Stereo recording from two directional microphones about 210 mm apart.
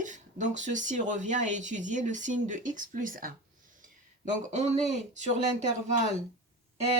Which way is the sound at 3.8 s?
35° right (ahead or behind).